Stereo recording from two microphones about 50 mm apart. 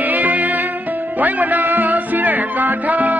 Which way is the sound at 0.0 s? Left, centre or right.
Right.